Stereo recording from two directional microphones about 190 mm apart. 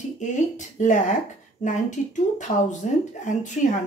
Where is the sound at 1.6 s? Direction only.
40° left (ahead or behind).